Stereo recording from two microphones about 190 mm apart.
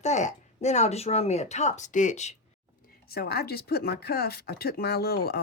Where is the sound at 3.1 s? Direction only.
55° left (ahead or behind).